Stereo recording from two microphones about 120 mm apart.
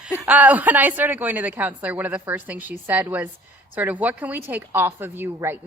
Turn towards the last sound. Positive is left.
turn(degrees=-20)  # may be behind; listen again after turning